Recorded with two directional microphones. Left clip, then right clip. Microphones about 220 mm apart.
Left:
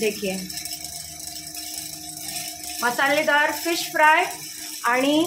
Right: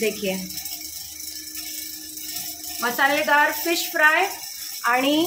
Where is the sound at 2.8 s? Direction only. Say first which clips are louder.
Even; 10° left (ahead or behind).